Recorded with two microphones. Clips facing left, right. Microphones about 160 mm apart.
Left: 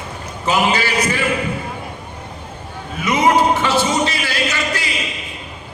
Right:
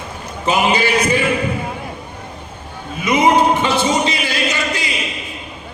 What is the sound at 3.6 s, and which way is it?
Music, 20° right (ahead or behind).